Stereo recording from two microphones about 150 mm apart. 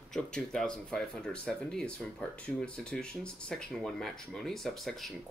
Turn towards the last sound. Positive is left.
turn(degrees=0)  # may be behind; listen again after turning